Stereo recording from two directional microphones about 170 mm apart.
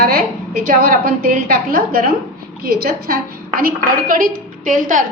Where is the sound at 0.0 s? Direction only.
60° right (ahead or behind).